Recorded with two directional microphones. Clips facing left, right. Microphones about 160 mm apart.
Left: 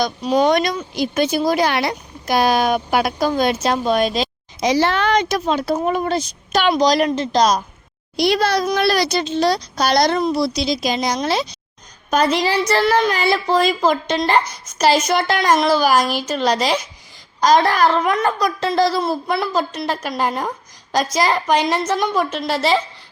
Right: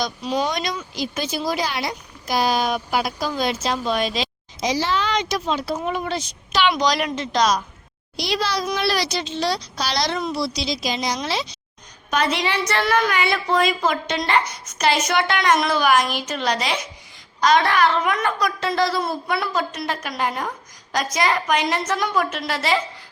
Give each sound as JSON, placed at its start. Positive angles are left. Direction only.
{"t": 0.0, "sound": "speech", "side_deg": 55}
{"t": 8.1, "sound": "speech", "side_deg": 55}
{"t": 10.2, "sound": "a woman's voice", "side_deg": 35}
{"t": 10.4, "sound": "a woman's voice", "side_deg": 50}